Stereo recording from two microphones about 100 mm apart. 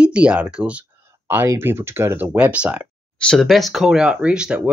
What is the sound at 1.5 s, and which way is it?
Speech, 25° right (ahead or behind).